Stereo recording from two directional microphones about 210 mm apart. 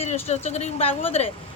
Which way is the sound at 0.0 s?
30° left (ahead or behind).